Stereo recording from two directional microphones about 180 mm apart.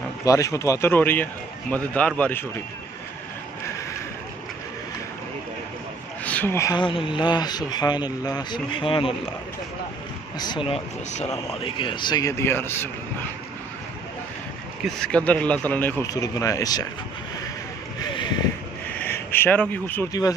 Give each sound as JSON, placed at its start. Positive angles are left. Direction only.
{"t": 0.2, "sound": "a man's voice", "side_deg": 20}
{"t": 6.2, "sound": "speech", "side_deg": 10}
{"t": 10.4, "sound": "speech", "side_deg": 25}
{"t": 14.9, "sound": "a man's voice", "side_deg": 5}
{"t": 19.0, "sound": "speech", "side_deg": 10}